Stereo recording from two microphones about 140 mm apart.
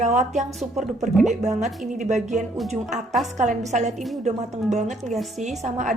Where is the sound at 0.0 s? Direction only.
55° right (ahead or behind).